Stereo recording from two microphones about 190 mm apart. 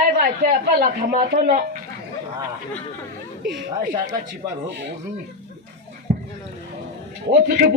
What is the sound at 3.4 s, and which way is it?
Speech, 65° right (ahead or behind).